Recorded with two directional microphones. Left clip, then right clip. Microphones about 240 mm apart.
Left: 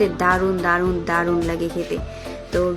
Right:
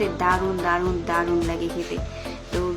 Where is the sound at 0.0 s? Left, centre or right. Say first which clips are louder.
Left 4 dB; centre.